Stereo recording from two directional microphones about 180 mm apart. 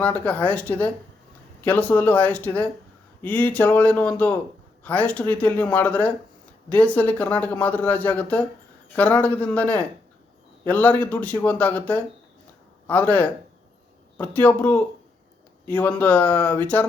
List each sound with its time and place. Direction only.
0.0 s speech: 10° left (ahead or behind)